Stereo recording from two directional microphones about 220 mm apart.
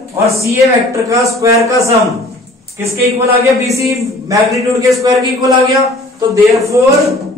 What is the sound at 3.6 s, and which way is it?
Speech, 15° right (ahead or behind).